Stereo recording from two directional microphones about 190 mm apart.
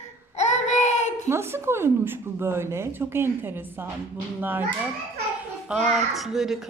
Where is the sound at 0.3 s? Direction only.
35° left (ahead or behind).